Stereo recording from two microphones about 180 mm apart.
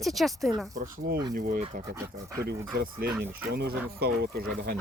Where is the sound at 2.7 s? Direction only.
55° right (ahead or behind).